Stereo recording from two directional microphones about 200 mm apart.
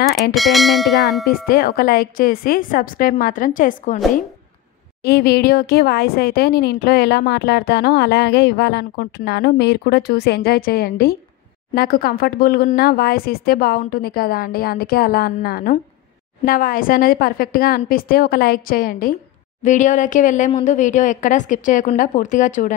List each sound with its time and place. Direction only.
0.3 s speech: centre (ahead or behind)
1.3 s speech: 45° left (ahead or behind)
5.0 s a woman's voice: 50° left (ahead or behind)